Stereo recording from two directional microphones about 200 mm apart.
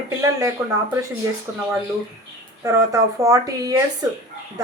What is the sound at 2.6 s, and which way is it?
A woman's voice, 15° right (ahead or behind).